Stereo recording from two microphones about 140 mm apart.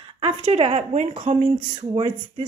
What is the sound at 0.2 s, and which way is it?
A woman's voice, 45° right (ahead or behind).